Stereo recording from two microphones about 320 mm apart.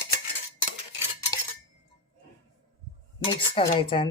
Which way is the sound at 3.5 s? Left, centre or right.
Centre.